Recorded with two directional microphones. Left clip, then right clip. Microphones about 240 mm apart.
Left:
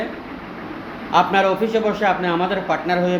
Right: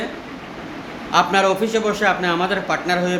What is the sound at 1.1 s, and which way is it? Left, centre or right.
Speech, centre.